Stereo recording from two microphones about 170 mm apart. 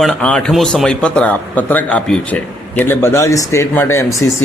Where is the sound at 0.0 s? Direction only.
5° left (ahead or behind).